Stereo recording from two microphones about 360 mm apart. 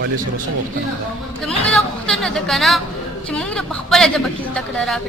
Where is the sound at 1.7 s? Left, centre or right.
Centre.